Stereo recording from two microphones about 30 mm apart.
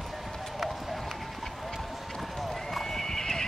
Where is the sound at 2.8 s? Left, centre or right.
Centre.